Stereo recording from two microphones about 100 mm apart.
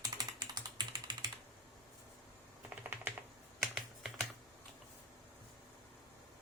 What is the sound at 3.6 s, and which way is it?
Computer keyboard, centre (ahead or behind).